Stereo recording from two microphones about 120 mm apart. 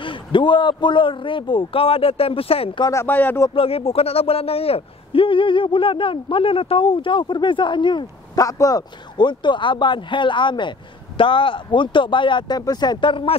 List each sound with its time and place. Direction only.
0.0 s speech: 45° left (ahead or behind)
2.8 s speech: 25° left (ahead or behind)
3.1 s speech: 15° left (ahead or behind)
3.5 s speech: 50° left (ahead or behind)